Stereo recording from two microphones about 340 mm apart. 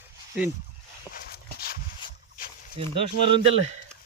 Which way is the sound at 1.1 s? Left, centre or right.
Centre.